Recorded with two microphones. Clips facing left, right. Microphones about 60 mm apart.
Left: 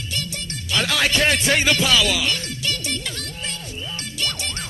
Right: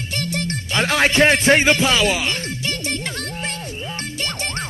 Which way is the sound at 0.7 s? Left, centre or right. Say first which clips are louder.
Right 4 dB; right.